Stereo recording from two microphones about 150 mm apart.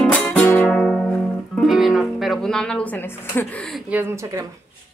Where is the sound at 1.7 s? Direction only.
Centre (ahead or behind).